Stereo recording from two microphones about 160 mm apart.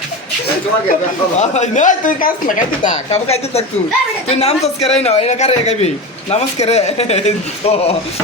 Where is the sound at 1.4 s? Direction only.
45° left (ahead or behind).